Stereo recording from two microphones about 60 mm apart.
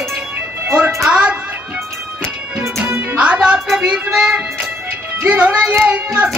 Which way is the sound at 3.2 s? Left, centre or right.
Right.